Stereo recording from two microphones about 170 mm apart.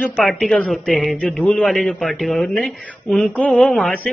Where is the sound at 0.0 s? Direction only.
5° left (ahead or behind).